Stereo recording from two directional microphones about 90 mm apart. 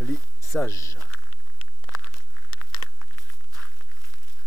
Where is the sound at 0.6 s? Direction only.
35° left (ahead or behind).